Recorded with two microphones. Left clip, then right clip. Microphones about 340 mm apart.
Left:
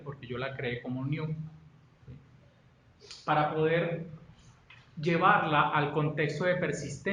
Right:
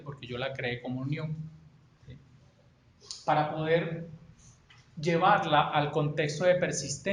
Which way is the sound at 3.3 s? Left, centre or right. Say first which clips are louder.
Even; centre.